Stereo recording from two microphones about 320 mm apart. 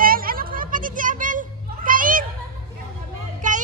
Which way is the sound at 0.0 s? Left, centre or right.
Right.